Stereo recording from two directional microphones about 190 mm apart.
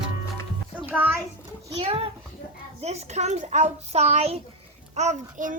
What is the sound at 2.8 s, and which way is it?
A child's voice, 35° right (ahead or behind).